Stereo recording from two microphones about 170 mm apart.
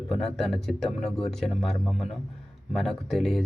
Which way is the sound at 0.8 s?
35° left (ahead or behind).